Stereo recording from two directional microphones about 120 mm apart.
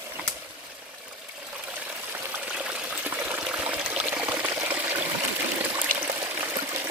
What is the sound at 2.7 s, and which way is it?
Pour, 10° right (ahead or behind).